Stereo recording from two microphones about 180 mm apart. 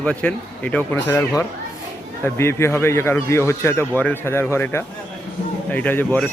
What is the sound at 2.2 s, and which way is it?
A man's voice, 15° left (ahead or behind).